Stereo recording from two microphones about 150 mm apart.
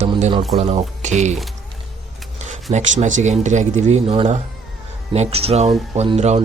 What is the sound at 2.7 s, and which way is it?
Speech, 50° right (ahead or behind).